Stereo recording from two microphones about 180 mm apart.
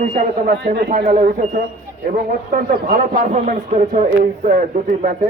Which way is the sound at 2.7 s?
45° right (ahead or behind).